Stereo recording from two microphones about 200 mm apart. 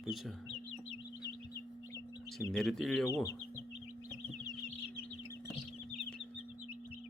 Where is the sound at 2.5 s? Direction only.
Centre (ahead or behind).